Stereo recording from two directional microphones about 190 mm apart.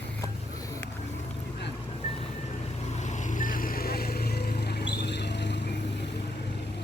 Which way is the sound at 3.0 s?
40° left (ahead or behind).